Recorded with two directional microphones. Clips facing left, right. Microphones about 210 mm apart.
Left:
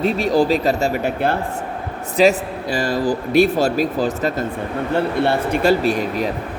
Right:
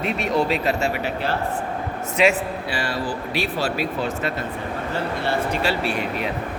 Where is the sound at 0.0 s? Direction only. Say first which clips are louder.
Left 5 dB; 35° left (ahead or behind); by 1.4 s 50° left (ahead or behind).